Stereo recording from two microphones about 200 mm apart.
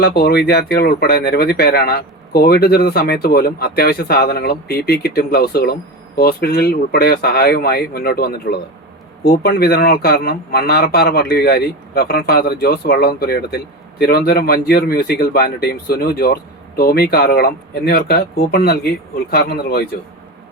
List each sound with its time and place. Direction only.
0.0 s speech: 50° left (ahead or behind)